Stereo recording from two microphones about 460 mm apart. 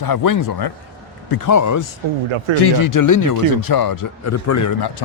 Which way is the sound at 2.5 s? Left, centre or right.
Left.